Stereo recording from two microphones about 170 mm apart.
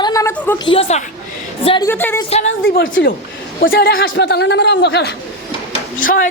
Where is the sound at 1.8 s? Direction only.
10° left (ahead or behind).